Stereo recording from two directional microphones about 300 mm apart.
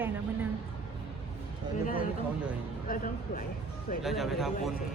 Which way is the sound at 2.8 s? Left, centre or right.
Left.